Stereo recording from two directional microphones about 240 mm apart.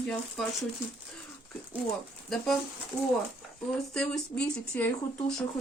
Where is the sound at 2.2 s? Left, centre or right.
Centre.